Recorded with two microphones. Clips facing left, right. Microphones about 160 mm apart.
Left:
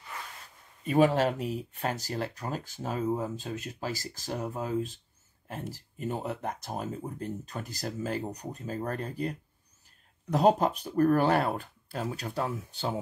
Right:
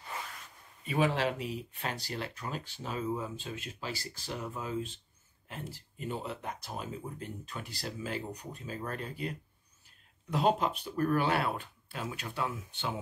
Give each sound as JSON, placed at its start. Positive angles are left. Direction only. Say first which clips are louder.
{"t": 0.8, "sound": "speech", "louder": "left 6 dB", "side_deg": 45}